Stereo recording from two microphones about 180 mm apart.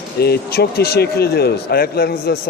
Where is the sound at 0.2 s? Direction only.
60° left (ahead or behind).